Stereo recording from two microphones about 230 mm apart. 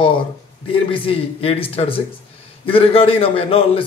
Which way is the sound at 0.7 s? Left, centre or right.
Left.